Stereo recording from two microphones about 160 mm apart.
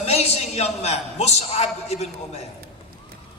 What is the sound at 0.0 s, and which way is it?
A man's voice, 40° left (ahead or behind).